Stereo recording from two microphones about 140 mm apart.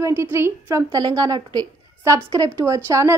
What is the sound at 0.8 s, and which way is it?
A woman's voice, 30° right (ahead or behind).